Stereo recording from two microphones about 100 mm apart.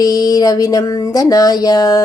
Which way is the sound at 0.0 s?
40° left (ahead or behind).